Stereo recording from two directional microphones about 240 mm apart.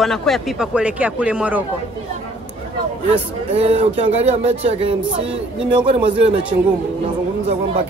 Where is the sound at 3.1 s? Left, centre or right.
Right.